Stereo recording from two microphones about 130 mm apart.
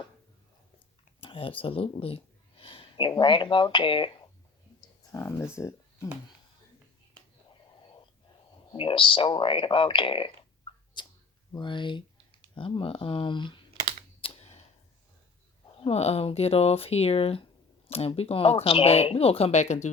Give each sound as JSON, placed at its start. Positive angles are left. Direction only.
{"t": 1.2, "sound": "a sound", "side_deg": 45}
{"t": 3.1, "sound": "speech", "side_deg": 40}
{"t": 5.1, "sound": "speech", "side_deg": 25}
{"t": 8.7, "sound": "speech", "side_deg": 45}
{"t": 11.0, "sound": "a sound", "side_deg": 35}
{"t": 11.5, "sound": "speech", "side_deg": 35}
{"t": 14.2, "sound": "typewriter", "side_deg": 50}
{"t": 15.8, "sound": "speech", "side_deg": 55}